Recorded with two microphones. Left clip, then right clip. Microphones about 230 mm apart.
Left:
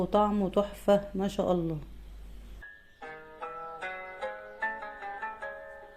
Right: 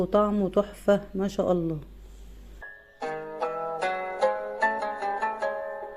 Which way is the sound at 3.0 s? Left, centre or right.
Right.